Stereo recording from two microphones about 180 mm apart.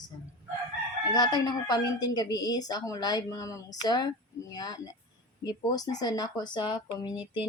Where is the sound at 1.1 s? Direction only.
25° left (ahead or behind).